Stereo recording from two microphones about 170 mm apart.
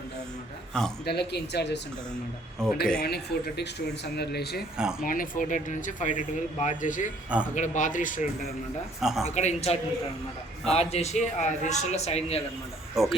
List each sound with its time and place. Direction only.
1.0 s speech: 75° left (ahead or behind)
2.6 s speech: 5° left (ahead or behind)
3.0 s speech: 70° left (ahead or behind)
4.8 s speech: 5° right (ahead or behind)
5.0 s speech: 55° left (ahead or behind)
9.0 s speech: centre (ahead or behind)
9.3 s a man's voice: 40° left (ahead or behind)
13.0 s speech: centre (ahead or behind)